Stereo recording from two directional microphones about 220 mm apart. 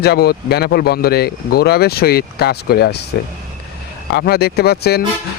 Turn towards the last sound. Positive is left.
turn(degrees=45)  # may be behind; listen again after turning